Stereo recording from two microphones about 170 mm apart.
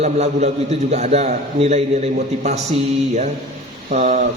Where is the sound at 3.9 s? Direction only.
50° right (ahead or behind).